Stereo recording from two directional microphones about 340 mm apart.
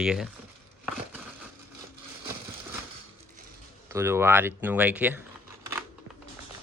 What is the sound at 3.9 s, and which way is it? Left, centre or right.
Speech, centre.